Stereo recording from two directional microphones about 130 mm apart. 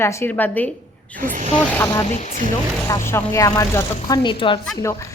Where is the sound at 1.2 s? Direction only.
80° right.